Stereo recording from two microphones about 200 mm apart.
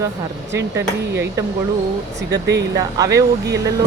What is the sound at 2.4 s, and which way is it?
Speech, 60° right (ahead or behind).